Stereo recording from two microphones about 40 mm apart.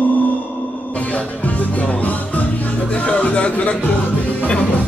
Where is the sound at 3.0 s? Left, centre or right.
Left.